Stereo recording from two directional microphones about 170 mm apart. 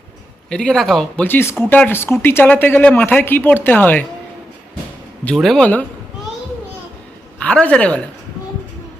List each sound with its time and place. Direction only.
0.5 s speech: 5° left (ahead or behind)
5.2 s speech: 5° left (ahead or behind)
7.3 s a woman's voice: 5° left (ahead or behind)